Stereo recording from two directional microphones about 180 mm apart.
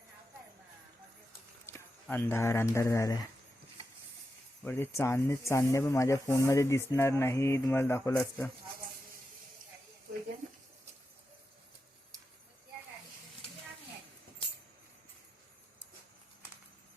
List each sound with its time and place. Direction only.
1.6 s speech: 10° left (ahead or behind)
4.6 s speech: 10° left (ahead or behind)